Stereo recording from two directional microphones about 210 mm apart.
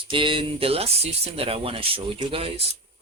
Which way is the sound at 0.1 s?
25° right (ahead or behind).